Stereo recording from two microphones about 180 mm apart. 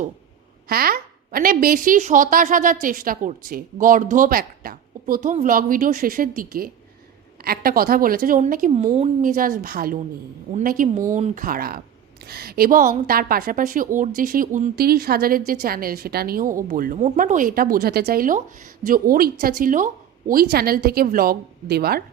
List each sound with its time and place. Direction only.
0.7 s a woman's voice: 55° right (ahead or behind)
8.7 s a woman's voice: 35° right (ahead or behind); by 22.0 s 60° right (ahead or behind)